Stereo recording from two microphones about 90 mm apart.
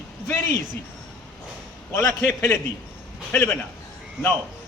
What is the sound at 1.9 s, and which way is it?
A man's voice, 25° left (ahead or behind).